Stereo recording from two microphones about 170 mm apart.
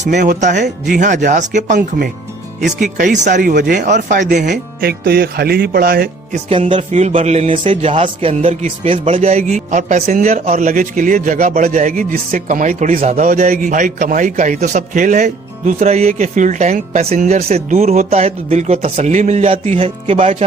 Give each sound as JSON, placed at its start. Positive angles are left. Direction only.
{"t": 0.0, "sound": "a man's voice", "side_deg": -45}
{"t": 4.8, "sound": "speech", "side_deg": -65}
{"t": 6.3, "sound": "a man's voice", "side_deg": -35}